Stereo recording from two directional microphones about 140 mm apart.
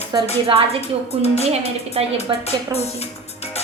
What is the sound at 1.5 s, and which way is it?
Speech, 45° right (ahead or behind).